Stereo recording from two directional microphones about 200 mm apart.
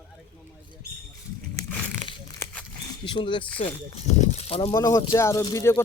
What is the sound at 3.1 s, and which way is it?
Speech, 25° left (ahead or behind).